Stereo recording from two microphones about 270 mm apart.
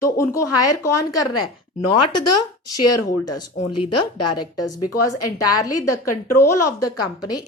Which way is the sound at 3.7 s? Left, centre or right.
Left.